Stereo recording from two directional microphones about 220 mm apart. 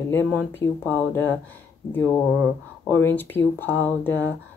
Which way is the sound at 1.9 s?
10° left (ahead or behind).